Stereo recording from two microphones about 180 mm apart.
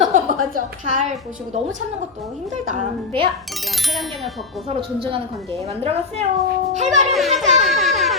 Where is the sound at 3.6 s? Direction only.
Centre (ahead or behind).